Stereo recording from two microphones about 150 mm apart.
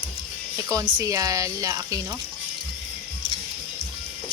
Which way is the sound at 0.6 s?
25° right (ahead or behind).